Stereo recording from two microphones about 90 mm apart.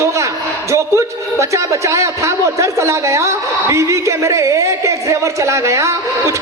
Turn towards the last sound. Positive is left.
turn(degrees=-35)  # may be behind; listen again after turning